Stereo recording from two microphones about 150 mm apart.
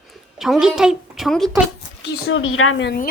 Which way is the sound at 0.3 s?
Centre (ahead or behind).